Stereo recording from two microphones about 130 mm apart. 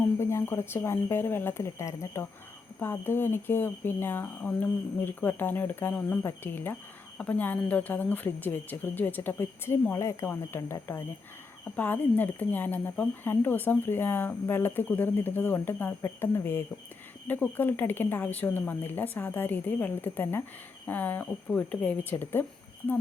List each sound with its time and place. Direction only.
0.2 s speech: 20° left (ahead or behind)